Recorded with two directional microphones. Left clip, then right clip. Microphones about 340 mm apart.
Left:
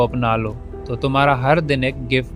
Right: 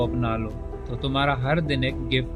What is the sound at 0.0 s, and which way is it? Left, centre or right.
A man's voice, left.